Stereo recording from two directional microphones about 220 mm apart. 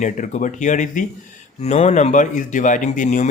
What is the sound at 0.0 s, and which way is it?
Speech, 35° left (ahead or behind).